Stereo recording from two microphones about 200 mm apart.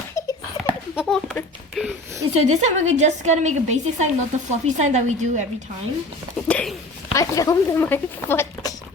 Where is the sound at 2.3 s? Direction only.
35° right (ahead or behind).